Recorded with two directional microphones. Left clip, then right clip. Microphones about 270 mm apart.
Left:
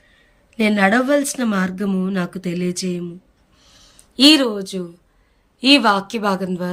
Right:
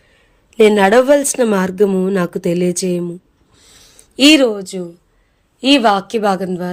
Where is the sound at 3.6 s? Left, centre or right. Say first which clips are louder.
Right 4 dB; centre.